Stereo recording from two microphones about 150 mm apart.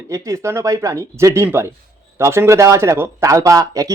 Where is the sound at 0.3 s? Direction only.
20° right (ahead or behind).